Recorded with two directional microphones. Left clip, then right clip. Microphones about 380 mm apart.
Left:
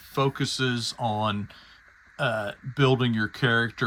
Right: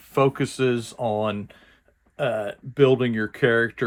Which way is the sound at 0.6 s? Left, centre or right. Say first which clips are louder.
Right 5 dB; centre.